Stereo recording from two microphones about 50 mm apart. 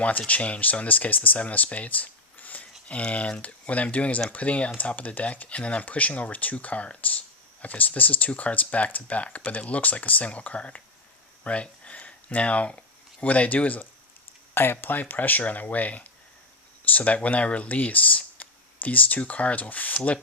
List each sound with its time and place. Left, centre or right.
0.3 s speech: left
14.5 s speech: left